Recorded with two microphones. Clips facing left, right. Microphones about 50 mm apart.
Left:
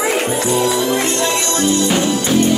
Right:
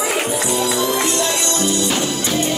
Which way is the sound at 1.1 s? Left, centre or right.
Left.